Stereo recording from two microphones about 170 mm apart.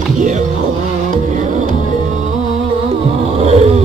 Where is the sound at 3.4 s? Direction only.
40° right (ahead or behind).